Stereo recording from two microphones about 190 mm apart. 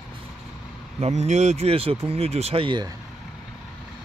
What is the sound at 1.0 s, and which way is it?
Speech, 35° right (ahead or behind).